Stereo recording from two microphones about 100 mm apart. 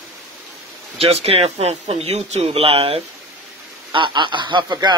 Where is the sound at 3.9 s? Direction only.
55° right (ahead or behind).